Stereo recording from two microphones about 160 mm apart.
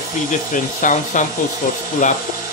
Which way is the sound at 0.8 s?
50° left (ahead or behind).